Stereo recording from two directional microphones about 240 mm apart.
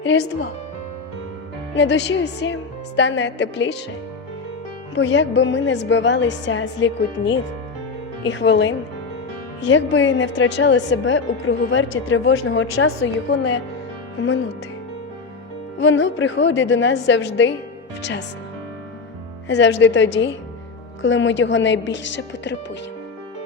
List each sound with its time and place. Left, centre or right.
0.0 s speech: left
1.7 s a woman's voice: left
4.9 s a woman's voice: left
15.8 s a woman's voice: left
19.5 s a woman's voice: left